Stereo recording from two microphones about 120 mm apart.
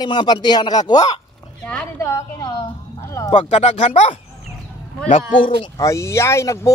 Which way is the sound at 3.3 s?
75° left (ahead or behind).